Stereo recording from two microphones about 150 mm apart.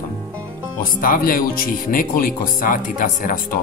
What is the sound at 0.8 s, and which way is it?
Speech, 70° left (ahead or behind).